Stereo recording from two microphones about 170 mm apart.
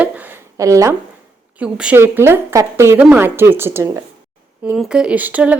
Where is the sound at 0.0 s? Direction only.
10° right (ahead or behind).